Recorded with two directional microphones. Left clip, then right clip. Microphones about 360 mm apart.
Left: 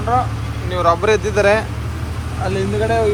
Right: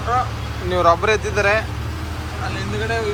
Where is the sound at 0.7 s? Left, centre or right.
Centre.